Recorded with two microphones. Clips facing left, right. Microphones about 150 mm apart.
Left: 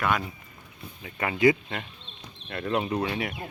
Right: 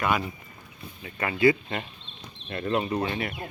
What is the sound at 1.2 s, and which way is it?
Speech, 15° left (ahead or behind).